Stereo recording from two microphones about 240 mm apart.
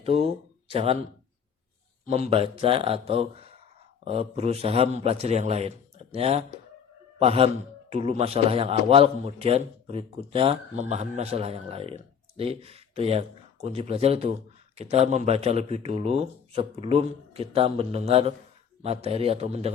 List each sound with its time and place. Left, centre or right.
0.0 s speech: right
2.0 s a man's voice: right